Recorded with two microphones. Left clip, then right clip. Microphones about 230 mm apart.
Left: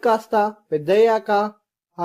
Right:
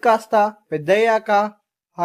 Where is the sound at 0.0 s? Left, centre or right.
Right.